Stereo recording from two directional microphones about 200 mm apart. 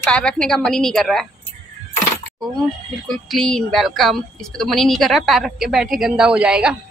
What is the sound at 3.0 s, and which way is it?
A woman's voice, centre (ahead or behind).